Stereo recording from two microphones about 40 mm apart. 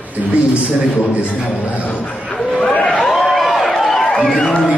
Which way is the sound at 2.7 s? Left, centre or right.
Left.